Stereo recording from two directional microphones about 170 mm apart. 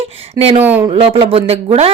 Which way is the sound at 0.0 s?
35° right (ahead or behind).